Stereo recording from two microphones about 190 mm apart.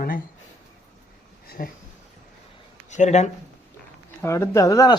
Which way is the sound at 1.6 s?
50° left (ahead or behind).